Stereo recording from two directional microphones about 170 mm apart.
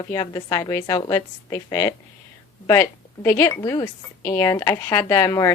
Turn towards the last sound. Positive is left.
turn(degrees=15)  # may be behind; listen again after turning